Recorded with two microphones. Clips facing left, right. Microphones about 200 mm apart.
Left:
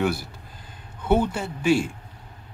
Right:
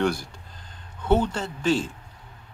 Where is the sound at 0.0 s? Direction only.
5° left (ahead or behind).